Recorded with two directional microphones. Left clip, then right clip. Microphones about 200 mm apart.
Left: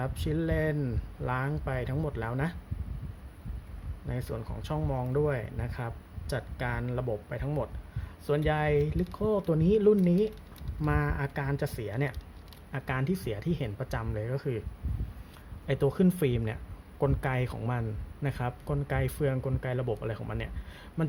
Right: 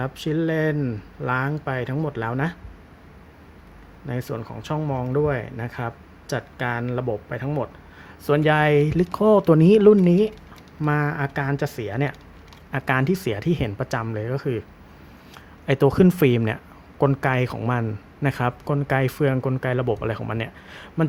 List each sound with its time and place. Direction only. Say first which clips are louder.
0.0 s a man's voice: right 8 dB; 10° right (ahead or behind)
4.1 s a man's voice: right 8 dB; 10° right (ahead or behind)
15.6 s a man's voice: right 10 dB; 15° right (ahead or behind)